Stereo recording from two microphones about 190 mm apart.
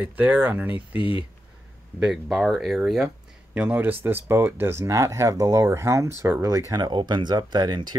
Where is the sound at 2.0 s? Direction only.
Centre (ahead or behind).